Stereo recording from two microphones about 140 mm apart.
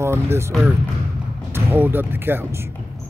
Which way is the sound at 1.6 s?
15° right (ahead or behind).